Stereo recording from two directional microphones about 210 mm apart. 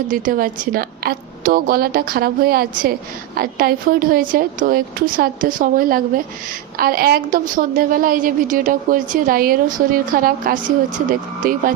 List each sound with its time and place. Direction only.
0.1 s a woman's voice: 40° right (ahead or behind)